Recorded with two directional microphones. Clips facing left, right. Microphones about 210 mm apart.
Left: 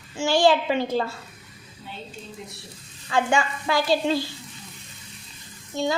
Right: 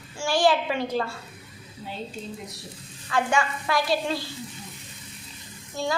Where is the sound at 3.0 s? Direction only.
25° left (ahead or behind).